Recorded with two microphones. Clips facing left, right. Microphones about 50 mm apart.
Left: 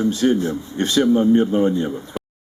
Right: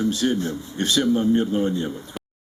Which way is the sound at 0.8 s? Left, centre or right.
Left.